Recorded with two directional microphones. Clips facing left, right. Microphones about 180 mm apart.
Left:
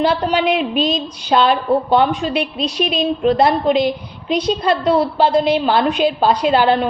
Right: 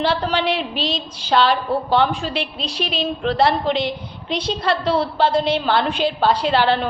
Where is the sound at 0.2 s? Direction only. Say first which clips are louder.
Left 4 dB; 15° left (ahead or behind).